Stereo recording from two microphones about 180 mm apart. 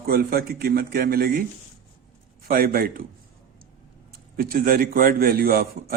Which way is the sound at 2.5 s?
55° right (ahead or behind).